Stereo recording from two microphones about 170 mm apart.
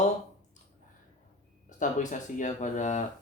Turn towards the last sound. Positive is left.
turn(degrees=45)  # may be behind; listen again after turning